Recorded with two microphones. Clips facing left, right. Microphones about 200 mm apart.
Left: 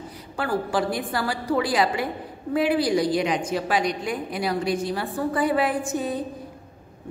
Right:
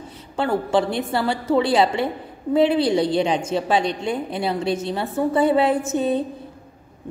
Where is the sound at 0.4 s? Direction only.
25° right (ahead or behind).